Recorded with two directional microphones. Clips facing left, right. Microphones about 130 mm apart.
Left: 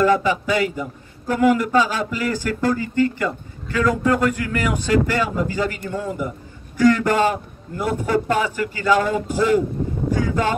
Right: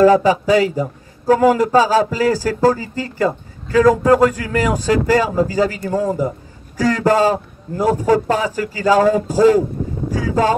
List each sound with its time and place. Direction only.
0.0 s a man's voice: 40° right (ahead or behind)